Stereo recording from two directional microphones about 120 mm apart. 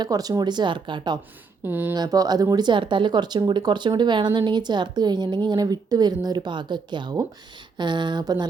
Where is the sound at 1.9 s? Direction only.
30° right (ahead or behind).